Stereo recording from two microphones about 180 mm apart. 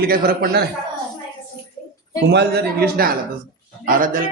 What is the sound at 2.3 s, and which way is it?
Speech, 65° right (ahead or behind).